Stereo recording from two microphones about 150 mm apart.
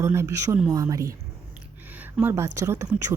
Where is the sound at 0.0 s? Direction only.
15° right (ahead or behind).